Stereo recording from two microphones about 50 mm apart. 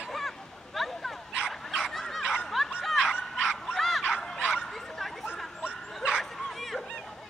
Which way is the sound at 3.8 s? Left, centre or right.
Centre.